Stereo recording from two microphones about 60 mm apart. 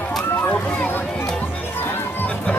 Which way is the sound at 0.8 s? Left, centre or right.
Left.